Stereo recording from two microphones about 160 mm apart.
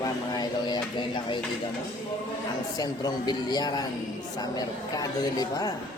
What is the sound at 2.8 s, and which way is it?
A man's voice, 25° left (ahead or behind).